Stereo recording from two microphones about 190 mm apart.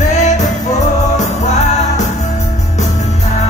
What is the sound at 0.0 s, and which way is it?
Music, 40° left (ahead or behind).